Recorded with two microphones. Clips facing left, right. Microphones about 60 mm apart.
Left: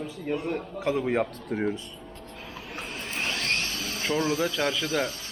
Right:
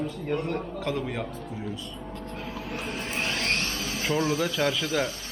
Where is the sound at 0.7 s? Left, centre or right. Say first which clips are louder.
Left 3 dB; centre.